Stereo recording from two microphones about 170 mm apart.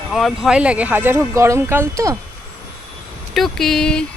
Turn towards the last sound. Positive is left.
turn(degrees=5)  # may be behind; listen again after turning